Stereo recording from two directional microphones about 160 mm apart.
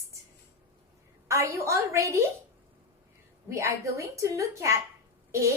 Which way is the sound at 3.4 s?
15° right (ahead or behind).